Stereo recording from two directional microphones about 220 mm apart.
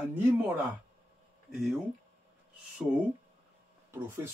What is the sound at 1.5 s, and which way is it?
Speech, centre (ahead or behind).